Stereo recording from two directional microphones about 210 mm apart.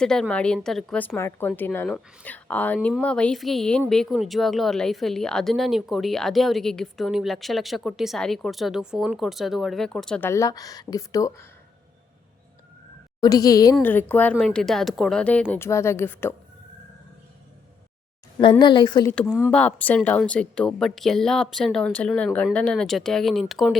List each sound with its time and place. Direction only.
0.0 s a woman's voice: 5° left (ahead or behind)
13.2 s a woman's voice: 15° left (ahead or behind)
18.6 s a woman's voice: 20° left (ahead or behind)
19.3 s a woman's voice: centre (ahead or behind)